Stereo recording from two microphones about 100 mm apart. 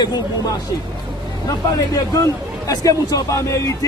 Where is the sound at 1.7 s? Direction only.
35° left (ahead or behind).